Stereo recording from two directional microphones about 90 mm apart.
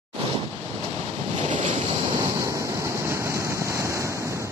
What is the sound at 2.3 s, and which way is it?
Waves, 35° right (ahead or behind).